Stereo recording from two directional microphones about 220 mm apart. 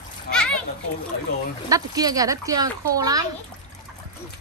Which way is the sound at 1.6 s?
15° right (ahead or behind).